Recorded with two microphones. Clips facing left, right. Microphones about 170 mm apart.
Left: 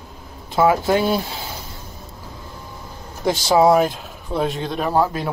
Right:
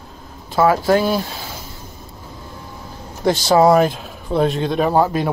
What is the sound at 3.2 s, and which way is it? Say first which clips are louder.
Speech: right 2 dB; 5° left (ahead or behind).